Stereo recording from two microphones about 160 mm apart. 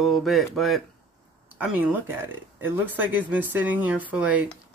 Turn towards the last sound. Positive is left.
turn(degrees=-10)  # may be behind; listen again after turning